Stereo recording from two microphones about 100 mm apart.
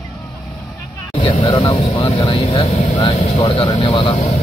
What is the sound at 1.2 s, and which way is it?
Speech, 60° left (ahead or behind).